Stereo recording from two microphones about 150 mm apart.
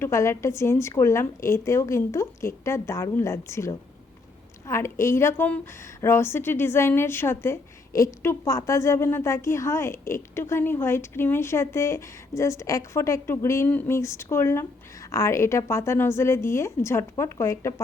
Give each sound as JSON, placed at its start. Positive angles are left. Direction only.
{"t": 0.0, "sound": "a woman's voice", "side_deg": 20}